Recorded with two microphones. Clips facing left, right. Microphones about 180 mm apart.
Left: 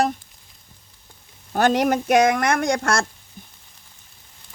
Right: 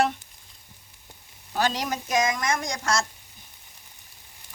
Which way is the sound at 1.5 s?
55° left (ahead or behind).